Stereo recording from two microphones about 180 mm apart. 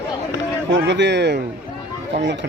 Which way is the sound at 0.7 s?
80° right.